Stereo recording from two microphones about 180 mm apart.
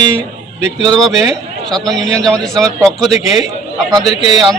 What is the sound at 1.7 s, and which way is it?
Speech, centre (ahead or behind).